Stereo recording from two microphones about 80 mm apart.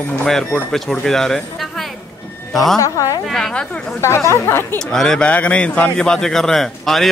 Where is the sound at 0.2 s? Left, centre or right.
Centre.